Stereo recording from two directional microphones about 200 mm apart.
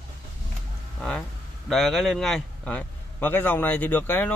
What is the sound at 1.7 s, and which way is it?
A man's voice, centre (ahead or behind).